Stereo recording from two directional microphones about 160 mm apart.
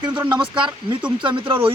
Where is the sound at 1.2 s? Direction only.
30° right (ahead or behind).